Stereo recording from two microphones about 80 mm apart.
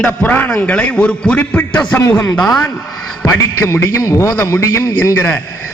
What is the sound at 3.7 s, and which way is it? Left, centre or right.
A man's voice, left.